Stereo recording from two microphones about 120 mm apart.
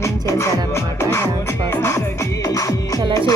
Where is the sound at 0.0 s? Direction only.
25° left (ahead or behind).